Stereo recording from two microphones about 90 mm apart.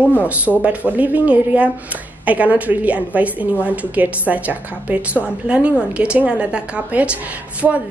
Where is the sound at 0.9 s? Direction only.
15° right (ahead or behind).